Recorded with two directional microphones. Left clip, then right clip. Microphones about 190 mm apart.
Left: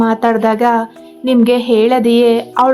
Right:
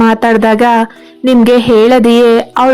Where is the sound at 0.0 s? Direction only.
25° right (ahead or behind).